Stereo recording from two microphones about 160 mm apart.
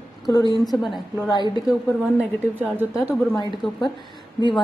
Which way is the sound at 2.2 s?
10° right (ahead or behind).